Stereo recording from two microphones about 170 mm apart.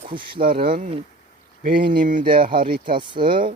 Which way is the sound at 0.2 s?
60° right (ahead or behind).